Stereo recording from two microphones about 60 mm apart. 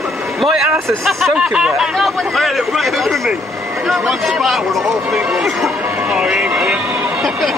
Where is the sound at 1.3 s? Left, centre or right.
Centre.